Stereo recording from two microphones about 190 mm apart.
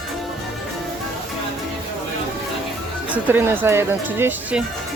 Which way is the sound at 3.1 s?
10° right (ahead or behind).